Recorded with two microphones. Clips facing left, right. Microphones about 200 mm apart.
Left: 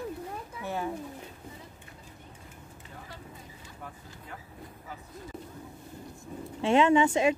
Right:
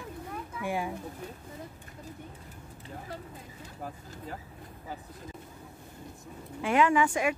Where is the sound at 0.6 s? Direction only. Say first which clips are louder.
Right 1 dB; 10° right (ahead or behind).